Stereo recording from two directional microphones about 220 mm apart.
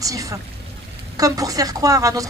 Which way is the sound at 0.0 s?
15° right (ahead or behind).